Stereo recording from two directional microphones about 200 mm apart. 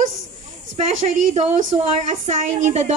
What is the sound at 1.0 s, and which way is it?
Speech, 35° right (ahead or behind).